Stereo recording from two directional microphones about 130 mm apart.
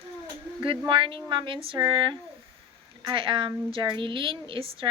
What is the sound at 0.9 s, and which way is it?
A woman's voice, 40° right (ahead or behind).